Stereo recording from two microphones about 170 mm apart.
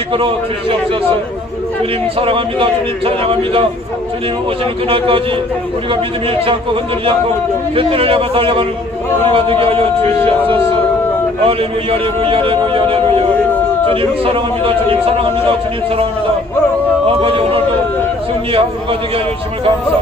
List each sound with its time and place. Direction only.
0.1 s a man's voice: 30° right (ahead or behind)
2.1 s a man's voice: 30° right (ahead or behind)
4.8 s a man's voice: 30° right (ahead or behind)
6.4 s a man's voice: 30° right (ahead or behind)
11.4 s a man's voice: 30° right (ahead or behind)
14.2 s a man's voice: 30° right (ahead or behind)
17.2 s a man's voice: 35° right (ahead or behind)